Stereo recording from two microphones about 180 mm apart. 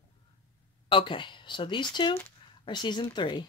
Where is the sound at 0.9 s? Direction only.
30° left (ahead or behind).